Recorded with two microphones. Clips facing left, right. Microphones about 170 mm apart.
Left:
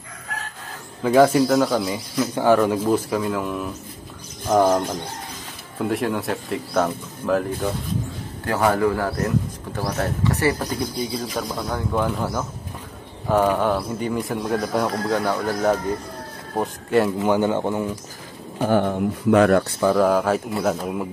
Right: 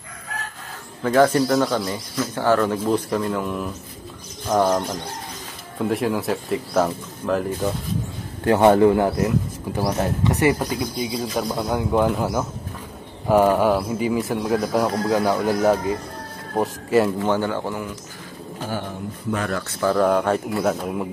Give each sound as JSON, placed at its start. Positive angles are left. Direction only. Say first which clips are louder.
{"t": 1.0, "sound": "speech", "louder": "left 1 dB", "side_deg": 10}
{"t": 5.9, "sound": "speech", "louder": "right 1 dB", "side_deg": 0}
{"t": 8.5, "sound": "a man's voice", "louder": "right 5 dB", "side_deg": -25}
{"t": 11.4, "sound": "speech", "louder": "right 3 dB", "side_deg": -20}
{"t": 17.2, "sound": "speech", "louder": "left 2 dB", "side_deg": 15}
{"t": 18.6, "sound": "speech", "louder": "left 10 dB", "side_deg": 55}
{"t": 19.8, "sound": "speech", "louder": "right 5 dB", "side_deg": 5}